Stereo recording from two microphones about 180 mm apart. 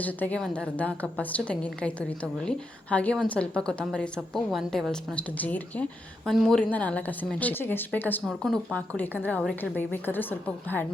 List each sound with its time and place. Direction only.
0.0 s a woman's voice: 10° left (ahead or behind)